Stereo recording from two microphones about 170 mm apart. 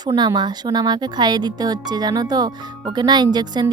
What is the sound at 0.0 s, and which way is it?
Speech, 25° right (ahead or behind).